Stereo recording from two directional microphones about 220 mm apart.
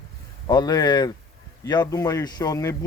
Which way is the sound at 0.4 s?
15° left (ahead or behind).